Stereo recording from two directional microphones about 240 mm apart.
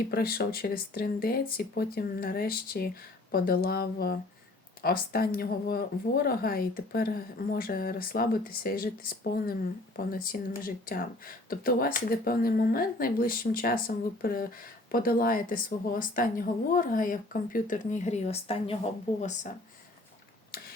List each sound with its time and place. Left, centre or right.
0.1 s speech: left